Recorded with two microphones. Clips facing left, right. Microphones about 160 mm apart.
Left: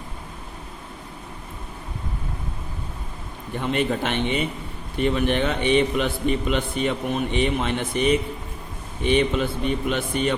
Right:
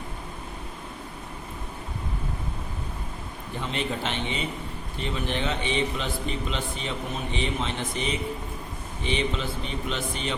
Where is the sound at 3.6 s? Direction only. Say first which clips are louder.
Left 7 dB; 55° left (ahead or behind).